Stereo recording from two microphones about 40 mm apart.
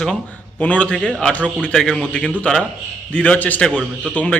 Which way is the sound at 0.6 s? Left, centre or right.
Left.